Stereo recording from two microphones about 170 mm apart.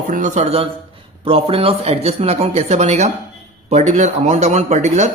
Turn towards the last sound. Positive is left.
turn(degrees=-40)  # may be behind; listen again after turning